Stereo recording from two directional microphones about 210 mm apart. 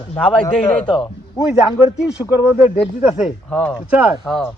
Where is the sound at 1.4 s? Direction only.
15° left (ahead or behind).